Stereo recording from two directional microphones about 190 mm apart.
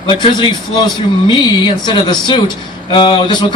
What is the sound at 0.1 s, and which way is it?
A man's voice, 25° left (ahead or behind).